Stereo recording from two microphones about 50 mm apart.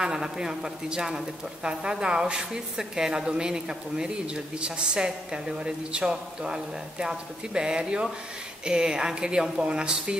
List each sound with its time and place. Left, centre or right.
0.0 s speech: centre